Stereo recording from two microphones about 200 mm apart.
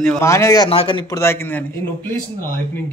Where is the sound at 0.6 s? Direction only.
25° left (ahead or behind).